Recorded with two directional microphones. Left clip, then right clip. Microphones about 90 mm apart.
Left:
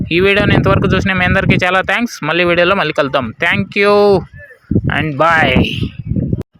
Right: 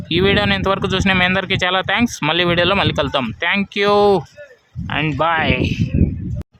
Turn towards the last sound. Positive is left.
turn(degrees=30)  # may be behind; listen again after turning